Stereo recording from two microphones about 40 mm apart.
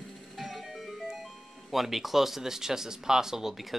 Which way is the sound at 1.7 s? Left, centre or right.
Centre.